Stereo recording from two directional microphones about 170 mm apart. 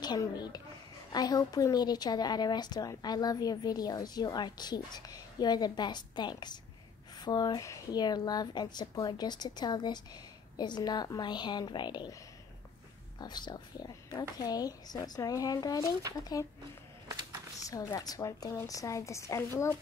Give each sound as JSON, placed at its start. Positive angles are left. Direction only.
{"t": 0.0, "sound": "a woman's voice", "side_deg": 25}
{"t": 13.2, "sound": "a woman's voice", "side_deg": 25}
{"t": 17.6, "sound": "a woman's voice", "side_deg": 20}